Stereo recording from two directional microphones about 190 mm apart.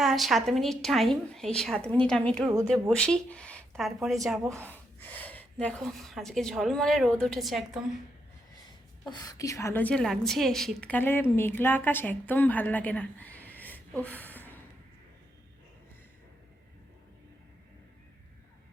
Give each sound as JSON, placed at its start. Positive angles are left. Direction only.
{"t": 0.0, "sound": "speech", "side_deg": 0}
{"t": 2.5, "sound": "speech", "side_deg": -15}
{"t": 3.0, "sound": "speech", "side_deg": 5}
{"t": 4.6, "sound": "speech", "side_deg": 10}
{"t": 9.0, "sound": "a woman's voice", "side_deg": 20}